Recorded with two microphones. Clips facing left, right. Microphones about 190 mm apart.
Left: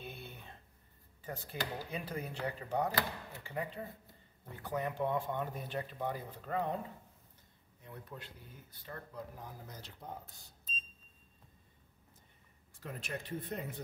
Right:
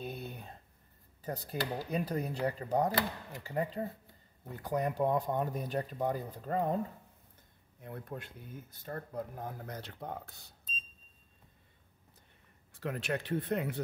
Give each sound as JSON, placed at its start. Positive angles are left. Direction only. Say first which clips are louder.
{"t": 0.0, "sound": "a sound", "louder": "right 7 dB", "side_deg": -40}
{"t": 1.2, "sound": "speech", "louder": "right 5 dB", "side_deg": -40}
{"t": 7.8, "sound": "speech", "louder": "right 6 dB", "side_deg": -55}
{"t": 12.8, "sound": "speech", "louder": "right 8 dB", "side_deg": -70}